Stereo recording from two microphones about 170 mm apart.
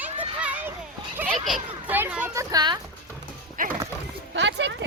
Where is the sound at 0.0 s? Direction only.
10° right (ahead or behind).